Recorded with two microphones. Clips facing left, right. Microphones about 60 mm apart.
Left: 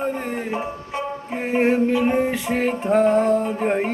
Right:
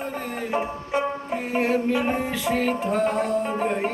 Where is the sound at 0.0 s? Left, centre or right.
Left.